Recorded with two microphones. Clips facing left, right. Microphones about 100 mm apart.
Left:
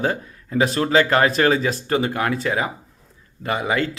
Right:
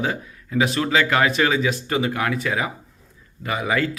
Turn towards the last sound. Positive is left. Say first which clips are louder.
# left 1 dB
turn(degrees=30)  # may be behind; listen again after turning